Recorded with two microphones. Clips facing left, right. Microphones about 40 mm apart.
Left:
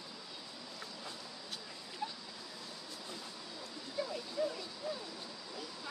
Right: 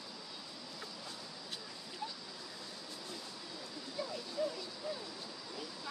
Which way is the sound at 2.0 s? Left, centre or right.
Left.